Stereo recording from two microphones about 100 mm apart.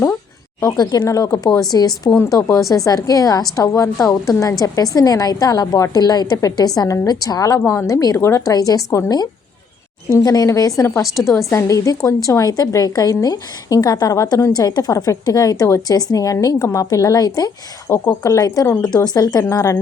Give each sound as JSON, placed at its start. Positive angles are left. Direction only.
{"t": 0.6, "sound": "speech", "side_deg": 40}
{"t": 10.2, "sound": "speech", "side_deg": 35}